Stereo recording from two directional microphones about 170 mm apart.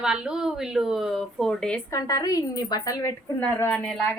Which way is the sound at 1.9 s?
20° left (ahead or behind).